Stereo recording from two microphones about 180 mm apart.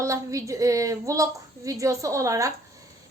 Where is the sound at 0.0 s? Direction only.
15° right (ahead or behind).